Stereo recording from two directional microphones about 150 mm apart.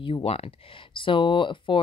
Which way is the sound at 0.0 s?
40° left (ahead or behind).